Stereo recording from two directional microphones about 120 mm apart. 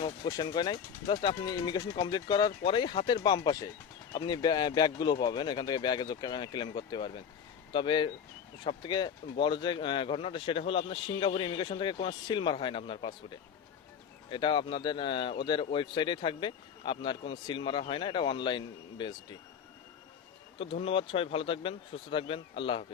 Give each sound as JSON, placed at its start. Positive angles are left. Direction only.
{"t": 0.0, "sound": "speech", "side_deg": 40}
{"t": 14.3, "sound": "speech", "side_deg": 40}
{"t": 20.6, "sound": "speech", "side_deg": 50}